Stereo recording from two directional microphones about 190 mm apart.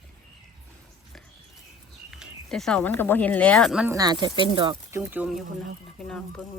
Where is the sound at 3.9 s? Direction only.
20° right (ahead or behind).